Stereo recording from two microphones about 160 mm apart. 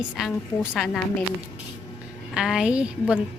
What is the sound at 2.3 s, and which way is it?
Speech, 5° right (ahead or behind).